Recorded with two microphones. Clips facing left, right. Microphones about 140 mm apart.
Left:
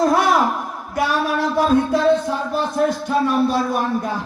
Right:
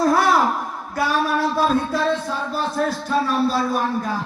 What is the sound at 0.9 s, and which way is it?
Music, 20° left (ahead or behind).